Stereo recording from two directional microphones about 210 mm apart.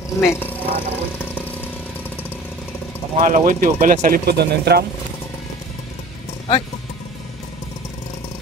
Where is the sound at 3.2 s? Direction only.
40° right (ahead or behind).